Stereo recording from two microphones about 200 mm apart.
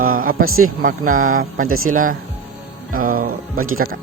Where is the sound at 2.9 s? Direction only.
45° right (ahead or behind).